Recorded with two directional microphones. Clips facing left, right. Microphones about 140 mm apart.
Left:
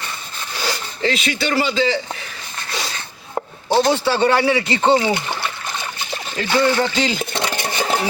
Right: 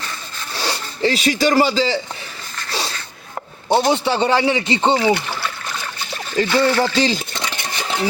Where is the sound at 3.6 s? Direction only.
20° right (ahead or behind).